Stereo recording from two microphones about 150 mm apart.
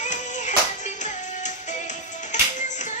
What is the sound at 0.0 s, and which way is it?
Music, 55° left (ahead or behind).